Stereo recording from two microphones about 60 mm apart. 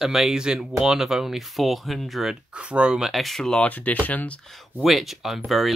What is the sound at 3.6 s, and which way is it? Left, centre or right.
Speech, left.